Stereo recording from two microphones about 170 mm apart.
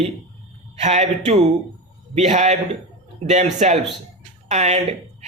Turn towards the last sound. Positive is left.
turn(degrees=-40)  # may be behind; listen again after turning